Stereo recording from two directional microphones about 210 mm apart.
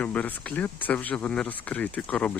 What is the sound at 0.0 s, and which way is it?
Speech, 5° left (ahead or behind).